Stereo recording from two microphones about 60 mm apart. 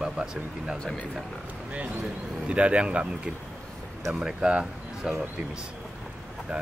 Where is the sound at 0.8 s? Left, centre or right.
Centre.